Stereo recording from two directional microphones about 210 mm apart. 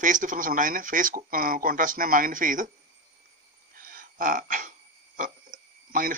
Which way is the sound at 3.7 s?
45° right (ahead or behind).